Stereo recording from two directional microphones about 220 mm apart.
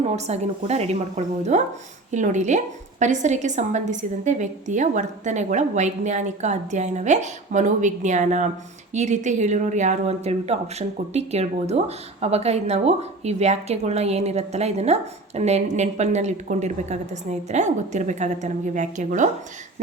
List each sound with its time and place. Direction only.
0.3 s a woman's voice: 30° right (ahead or behind)